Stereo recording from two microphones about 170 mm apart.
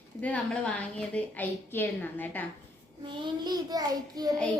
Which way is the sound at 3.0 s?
25° right (ahead or behind).